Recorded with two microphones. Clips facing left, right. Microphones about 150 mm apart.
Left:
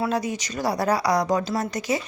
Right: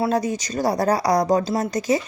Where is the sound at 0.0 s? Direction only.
45° right (ahead or behind).